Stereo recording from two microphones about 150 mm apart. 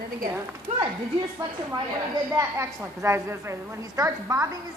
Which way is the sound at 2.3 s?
20° right (ahead or behind).